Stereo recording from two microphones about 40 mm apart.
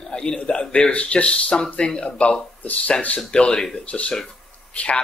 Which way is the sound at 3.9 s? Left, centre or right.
Left.